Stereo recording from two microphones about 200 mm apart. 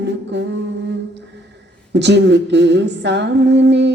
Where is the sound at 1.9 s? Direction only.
60° right (ahead or behind).